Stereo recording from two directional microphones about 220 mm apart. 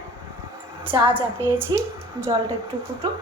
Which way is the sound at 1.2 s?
10° right (ahead or behind).